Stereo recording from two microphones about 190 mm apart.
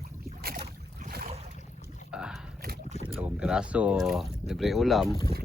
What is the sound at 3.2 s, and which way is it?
Speech, 5° right (ahead or behind).